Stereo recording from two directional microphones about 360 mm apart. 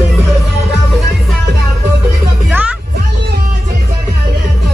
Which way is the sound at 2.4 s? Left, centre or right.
Centre.